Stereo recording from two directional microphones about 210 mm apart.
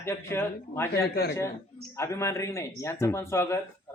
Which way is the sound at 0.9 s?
50° left (ahead or behind).